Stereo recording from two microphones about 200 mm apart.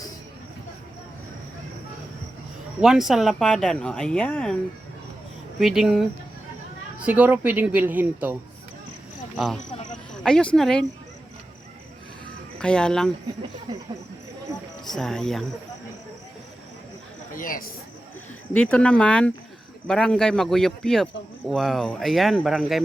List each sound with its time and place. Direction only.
2.8 s speech: centre (ahead or behind)
5.5 s speech: centre (ahead or behind)
10.2 s speech: 5° left (ahead or behind)
12.5 s speech: 5° left (ahead or behind)
14.8 s speech: centre (ahead or behind)
17.3 s speech: 45° left (ahead or behind)
18.5 s speech: 5° left (ahead or behind)